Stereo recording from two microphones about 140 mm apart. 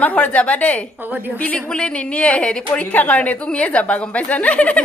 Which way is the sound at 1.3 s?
10° left (ahead or behind).